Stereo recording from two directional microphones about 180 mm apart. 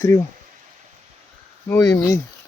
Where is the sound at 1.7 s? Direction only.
15° left (ahead or behind).